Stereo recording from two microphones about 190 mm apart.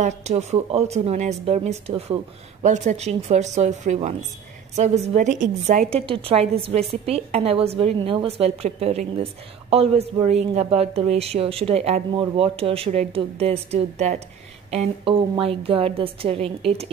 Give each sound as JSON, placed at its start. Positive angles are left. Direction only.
{"t": 0.0, "sound": "a woman's voice", "side_deg": -35}